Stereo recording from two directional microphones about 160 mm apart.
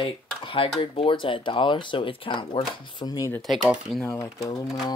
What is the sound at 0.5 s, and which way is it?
Speech, 35° left (ahead or behind).